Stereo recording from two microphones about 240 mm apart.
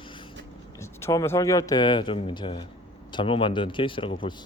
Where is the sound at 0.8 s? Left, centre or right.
Centre.